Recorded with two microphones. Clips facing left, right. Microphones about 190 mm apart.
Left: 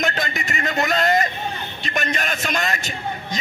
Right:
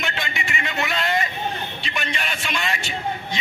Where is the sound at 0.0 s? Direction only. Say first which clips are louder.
Left 5 dB; 40° left (ahead or behind).